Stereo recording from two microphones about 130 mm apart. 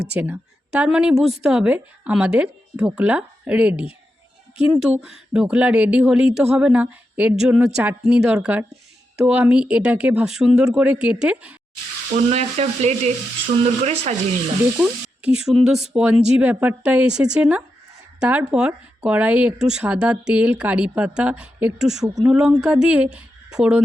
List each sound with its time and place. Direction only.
0.2 s speech: 10° right (ahead or behind)
12.1 s frying: 55° right (ahead or behind)
14.8 s speech: 5° right (ahead or behind)